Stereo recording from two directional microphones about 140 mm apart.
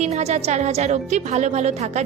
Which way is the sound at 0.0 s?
50° right (ahead or behind).